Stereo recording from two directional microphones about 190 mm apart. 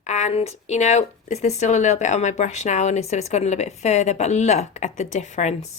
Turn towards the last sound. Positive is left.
turn(degrees=35)  # may be behind; listen again after turning